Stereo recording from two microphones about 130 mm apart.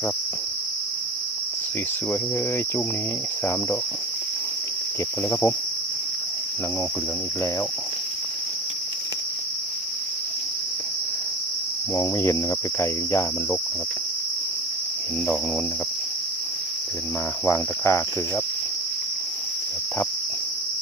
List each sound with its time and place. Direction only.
5.3 s cricket: 20° left (ahead or behind)
11.9 s cricket: 20° left (ahead or behind)
17.4 s cricket: 20° left (ahead or behind)